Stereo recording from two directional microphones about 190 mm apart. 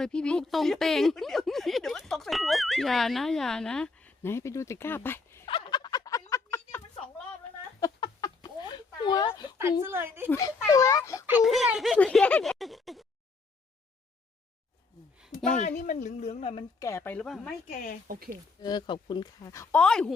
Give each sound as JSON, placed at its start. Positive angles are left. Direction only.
{"t": 0.0, "sound": "speech", "side_deg": 5}
{"t": 5.5, "sound": "a sound", "side_deg": 25}
{"t": 9.8, "sound": "speech", "side_deg": -10}
{"t": 10.2, "sound": "speech", "side_deg": 15}
{"t": 11.3, "sound": "speech", "side_deg": -5}
{"t": 15.5, "sound": "speech", "side_deg": 40}
{"t": 16.8, "sound": "speech", "side_deg": 15}
{"t": 18.1, "sound": "speech", "side_deg": -45}
{"t": 18.6, "sound": "speech", "side_deg": 20}